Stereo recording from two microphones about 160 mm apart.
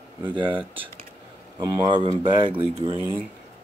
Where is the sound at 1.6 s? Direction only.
30° right (ahead or behind).